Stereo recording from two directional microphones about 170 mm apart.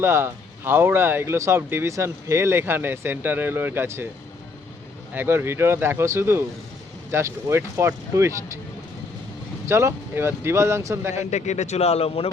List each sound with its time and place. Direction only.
0.0 s speech: 15° right (ahead or behind)
5.1 s speech: 10° right (ahead or behind)
9.6 s speech: 15° right (ahead or behind)
11.3 s speech: 45° left (ahead or behind)